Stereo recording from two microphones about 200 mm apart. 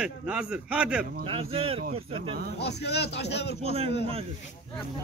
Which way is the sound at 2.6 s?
55° left (ahead or behind).